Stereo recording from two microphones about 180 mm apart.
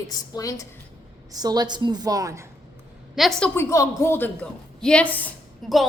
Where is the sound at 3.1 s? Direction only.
Centre (ahead or behind).